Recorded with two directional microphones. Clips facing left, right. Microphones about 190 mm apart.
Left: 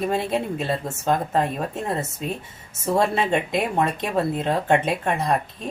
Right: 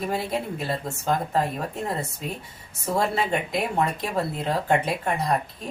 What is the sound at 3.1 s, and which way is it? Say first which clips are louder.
Speech: left 3 dB; 20° left (ahead or behind).